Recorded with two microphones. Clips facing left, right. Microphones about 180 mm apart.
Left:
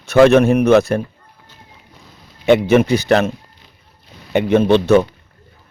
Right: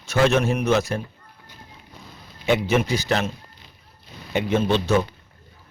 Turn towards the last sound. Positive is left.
turn(degrees=60)  # may be behind; listen again after turning